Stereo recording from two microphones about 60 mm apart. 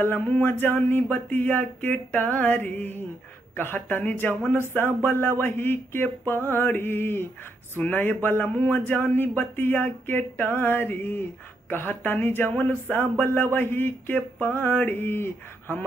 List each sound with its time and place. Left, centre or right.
0.0 s speech: left